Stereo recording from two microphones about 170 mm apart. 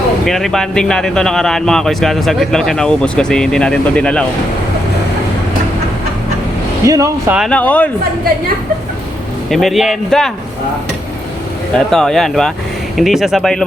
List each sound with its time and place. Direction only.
0.3 s speech: centre (ahead or behind)
6.8 s speech: 20° right (ahead or behind)
7.3 s speech: 5° left (ahead or behind)
9.5 s speech: centre (ahead or behind)
11.9 s speech: 5° left (ahead or behind)